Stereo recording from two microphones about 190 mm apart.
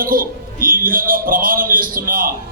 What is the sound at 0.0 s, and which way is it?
A man's voice, 50° right (ahead or behind).